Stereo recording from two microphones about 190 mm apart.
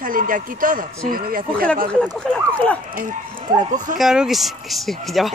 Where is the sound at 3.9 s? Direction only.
Centre (ahead or behind).